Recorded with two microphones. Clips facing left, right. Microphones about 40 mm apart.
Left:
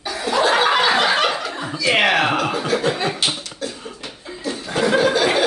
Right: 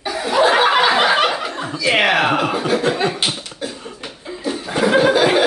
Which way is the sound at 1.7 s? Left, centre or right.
Centre.